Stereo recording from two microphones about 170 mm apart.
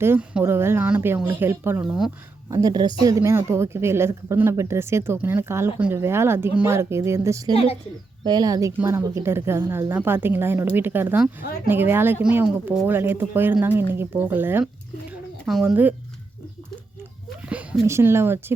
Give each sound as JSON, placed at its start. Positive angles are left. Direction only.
{"t": 0.0, "sound": "speech", "side_deg": -10}
{"t": 17.5, "sound": "speech", "side_deg": -10}